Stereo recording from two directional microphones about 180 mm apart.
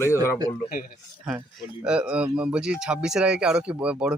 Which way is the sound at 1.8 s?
5° right (ahead or behind).